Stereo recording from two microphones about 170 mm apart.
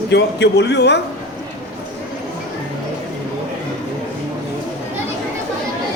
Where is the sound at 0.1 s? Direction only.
85° left.